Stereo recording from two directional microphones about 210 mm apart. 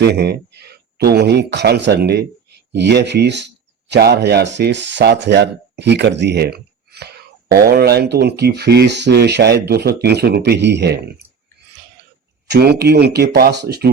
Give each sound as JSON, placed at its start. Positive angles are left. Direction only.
{"t": 0.0, "sound": "speech", "side_deg": -50}
{"t": 12.5, "sound": "speech", "side_deg": -50}